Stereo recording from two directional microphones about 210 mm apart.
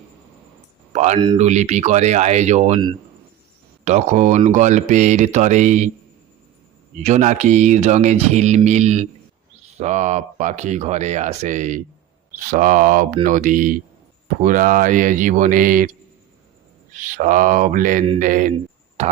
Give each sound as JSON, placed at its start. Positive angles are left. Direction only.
{"t": 0.9, "sound": "speech", "side_deg": -35}
{"t": 3.8, "sound": "speech", "side_deg": -35}
{"t": 7.0, "sound": "speech", "side_deg": -35}
{"t": 16.9, "sound": "speech", "side_deg": -35}
{"t": 19.0, "sound": "a sound", "side_deg": -30}